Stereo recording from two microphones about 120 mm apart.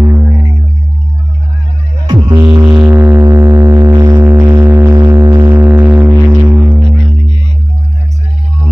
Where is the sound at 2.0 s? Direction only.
40° right (ahead or behind).